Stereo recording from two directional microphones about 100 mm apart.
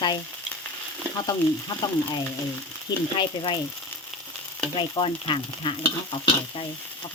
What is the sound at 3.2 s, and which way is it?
Frying, 50° left (ahead or behind).